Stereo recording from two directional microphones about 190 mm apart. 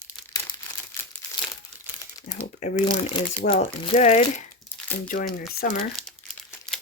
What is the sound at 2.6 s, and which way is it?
Speech, 35° left (ahead or behind).